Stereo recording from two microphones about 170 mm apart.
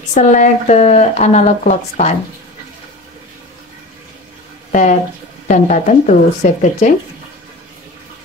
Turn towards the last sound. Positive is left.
turn(degrees=45)  # may be behind; listen again after turning